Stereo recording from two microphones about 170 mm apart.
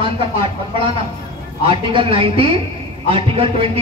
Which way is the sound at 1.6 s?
30° right (ahead or behind).